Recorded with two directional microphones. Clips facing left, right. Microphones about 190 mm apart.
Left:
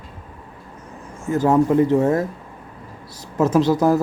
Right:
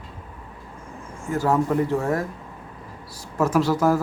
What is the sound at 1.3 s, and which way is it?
Speech, 20° left (ahead or behind).